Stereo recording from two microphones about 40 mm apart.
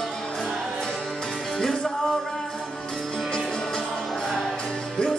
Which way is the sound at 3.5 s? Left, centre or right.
Centre.